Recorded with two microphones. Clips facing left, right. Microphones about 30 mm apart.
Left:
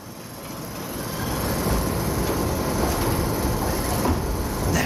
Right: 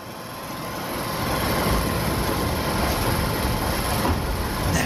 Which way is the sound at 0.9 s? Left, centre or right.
Right.